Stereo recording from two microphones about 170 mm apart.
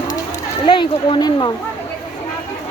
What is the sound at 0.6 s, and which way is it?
Speech, 30° left (ahead or behind).